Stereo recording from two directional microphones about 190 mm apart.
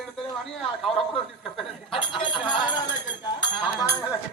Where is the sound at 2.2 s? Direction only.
25° left (ahead or behind).